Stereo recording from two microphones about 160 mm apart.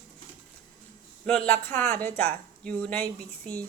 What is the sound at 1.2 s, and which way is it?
Speech, 5° left (ahead or behind).